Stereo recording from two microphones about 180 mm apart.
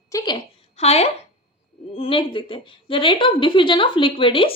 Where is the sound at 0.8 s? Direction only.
35° left (ahead or behind).